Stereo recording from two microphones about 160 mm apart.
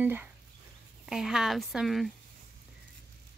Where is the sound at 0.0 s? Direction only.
10° right (ahead or behind).